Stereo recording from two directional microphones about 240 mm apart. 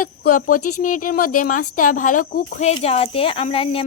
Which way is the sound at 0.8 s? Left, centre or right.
Left.